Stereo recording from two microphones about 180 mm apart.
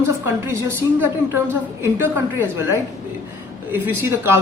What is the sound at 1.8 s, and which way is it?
Speech, 10° right (ahead or behind).